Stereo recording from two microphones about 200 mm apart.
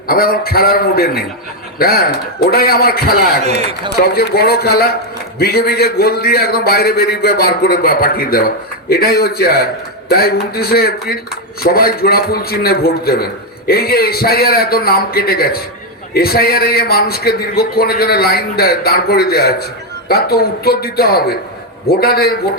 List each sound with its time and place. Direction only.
0.1 s a man's voice: 45° left (ahead or behind)